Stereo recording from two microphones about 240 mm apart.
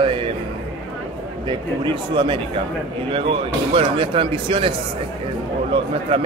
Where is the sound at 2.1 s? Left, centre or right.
Centre.